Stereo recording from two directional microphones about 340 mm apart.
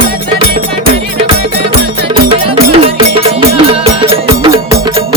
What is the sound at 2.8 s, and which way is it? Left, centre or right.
Music, centre.